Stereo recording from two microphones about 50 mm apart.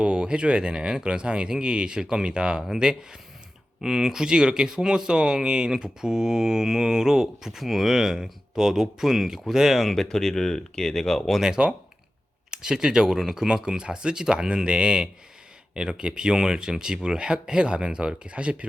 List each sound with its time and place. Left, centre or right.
0.0 s speech: centre
9.9 s speech: centre
11.3 s speech: centre